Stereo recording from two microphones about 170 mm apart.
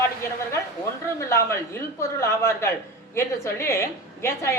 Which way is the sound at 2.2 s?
15° left (ahead or behind).